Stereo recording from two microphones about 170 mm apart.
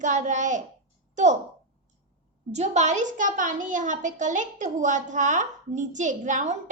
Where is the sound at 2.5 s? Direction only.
40° right (ahead or behind).